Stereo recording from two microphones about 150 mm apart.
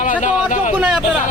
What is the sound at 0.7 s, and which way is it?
Speech, 5° right (ahead or behind).